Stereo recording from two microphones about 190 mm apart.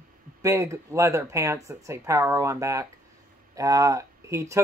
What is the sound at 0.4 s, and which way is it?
Speech, 15° right (ahead or behind).